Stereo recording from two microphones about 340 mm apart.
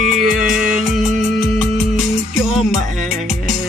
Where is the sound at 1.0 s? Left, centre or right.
Right.